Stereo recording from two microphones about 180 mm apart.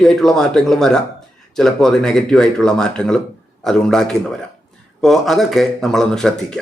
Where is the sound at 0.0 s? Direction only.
Centre (ahead or behind).